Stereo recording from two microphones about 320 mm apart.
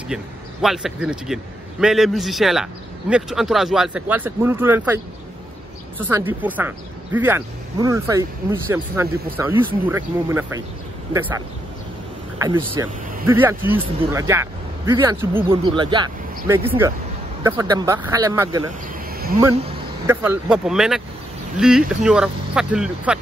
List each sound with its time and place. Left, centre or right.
0.1 s speech: centre
20.1 s speech: centre